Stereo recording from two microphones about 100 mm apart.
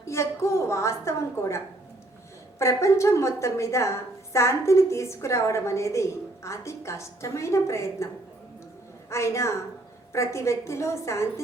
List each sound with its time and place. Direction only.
0.0 s a woman's voice: 30° left (ahead or behind)
9.0 s a woman's voice: 30° left (ahead or behind)